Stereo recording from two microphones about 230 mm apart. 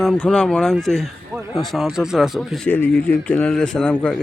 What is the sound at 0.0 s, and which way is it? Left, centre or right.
A man's voice, centre.